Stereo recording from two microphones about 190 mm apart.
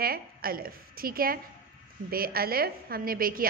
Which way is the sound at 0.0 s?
50° right (ahead or behind).